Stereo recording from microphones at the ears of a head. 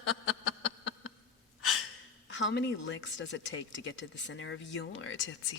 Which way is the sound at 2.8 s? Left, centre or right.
Left.